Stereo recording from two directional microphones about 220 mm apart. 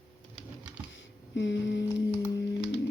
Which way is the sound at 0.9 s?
55° left (ahead or behind).